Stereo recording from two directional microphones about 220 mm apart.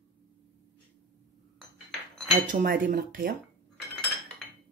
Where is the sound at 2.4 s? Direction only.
40° right (ahead or behind).